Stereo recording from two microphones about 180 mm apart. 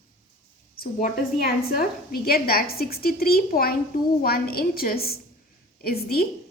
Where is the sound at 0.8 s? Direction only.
50° left (ahead or behind).